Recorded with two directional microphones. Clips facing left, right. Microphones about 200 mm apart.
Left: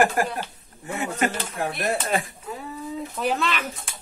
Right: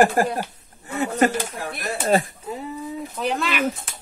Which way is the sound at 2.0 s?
25° right (ahead or behind).